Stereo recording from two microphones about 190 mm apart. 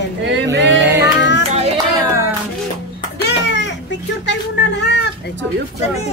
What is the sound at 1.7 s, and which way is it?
Clapping, 15° right (ahead or behind).